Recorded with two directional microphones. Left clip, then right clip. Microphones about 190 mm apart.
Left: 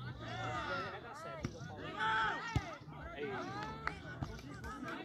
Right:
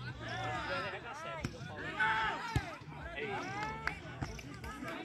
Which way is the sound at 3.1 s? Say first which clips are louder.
Right 3 dB; 50° left (ahead or behind).